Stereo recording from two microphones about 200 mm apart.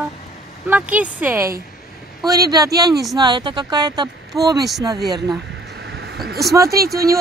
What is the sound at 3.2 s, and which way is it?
Speech, 20° right (ahead or behind).